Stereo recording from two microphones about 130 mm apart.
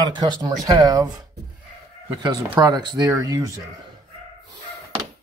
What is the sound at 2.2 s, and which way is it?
Speech, 30° right (ahead or behind).